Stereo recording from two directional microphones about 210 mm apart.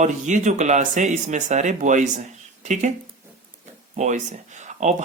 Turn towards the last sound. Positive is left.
turn(degrees=-35)  # may be behind; listen again after turning